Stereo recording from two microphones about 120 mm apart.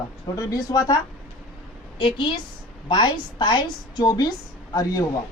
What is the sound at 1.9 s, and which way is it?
A woman's voice, 45° left (ahead or behind).